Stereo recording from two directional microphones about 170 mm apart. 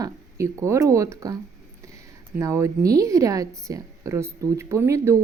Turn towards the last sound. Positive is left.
turn(degrees=-15)  # may be behind; listen again after turning